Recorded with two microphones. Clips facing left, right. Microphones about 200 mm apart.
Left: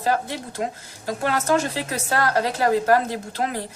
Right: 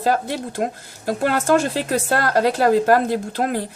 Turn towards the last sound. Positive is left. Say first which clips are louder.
# right 5 dB
turn(degrees=-55)  # may be behind; listen again after turning